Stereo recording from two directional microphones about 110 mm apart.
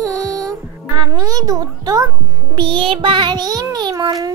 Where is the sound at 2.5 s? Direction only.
45° right (ahead or behind).